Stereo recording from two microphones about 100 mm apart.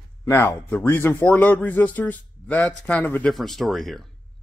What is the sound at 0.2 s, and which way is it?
Speech, 25° left (ahead or behind).